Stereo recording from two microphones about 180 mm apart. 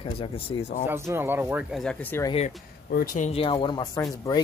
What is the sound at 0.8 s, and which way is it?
Speech, 15° right (ahead or behind).